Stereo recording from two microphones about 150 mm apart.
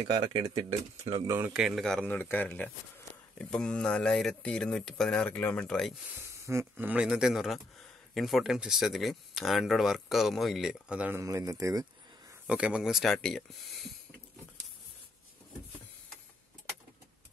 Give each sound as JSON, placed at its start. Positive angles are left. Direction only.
{"t": 0.2, "sound": "speech", "side_deg": -35}
{"t": 1.2, "sound": "speech", "side_deg": -20}
{"t": 1.5, "sound": "a man's voice", "side_deg": -5}
{"t": 6.1, "sound": "speech", "side_deg": -15}
{"t": 12.4, "sound": "speech", "side_deg": -5}